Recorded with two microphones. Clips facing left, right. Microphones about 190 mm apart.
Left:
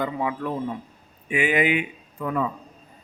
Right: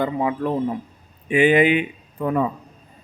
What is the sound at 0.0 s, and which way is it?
Speech, 30° right (ahead or behind).